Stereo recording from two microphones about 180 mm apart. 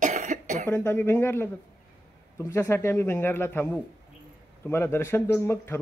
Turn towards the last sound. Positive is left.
turn(degrees=15)  # may be behind; listen again after turning